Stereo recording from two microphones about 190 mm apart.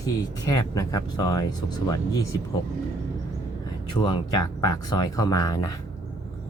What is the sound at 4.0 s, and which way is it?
Speech, 25° left (ahead or behind).